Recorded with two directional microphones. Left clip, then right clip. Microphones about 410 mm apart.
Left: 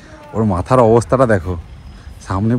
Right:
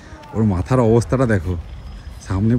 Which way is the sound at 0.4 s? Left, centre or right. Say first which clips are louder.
Left 6 dB; centre.